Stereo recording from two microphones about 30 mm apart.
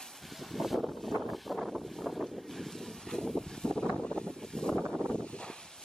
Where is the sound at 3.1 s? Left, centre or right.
Left.